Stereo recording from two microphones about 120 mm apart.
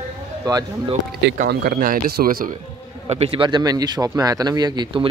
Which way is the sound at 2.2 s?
90° right.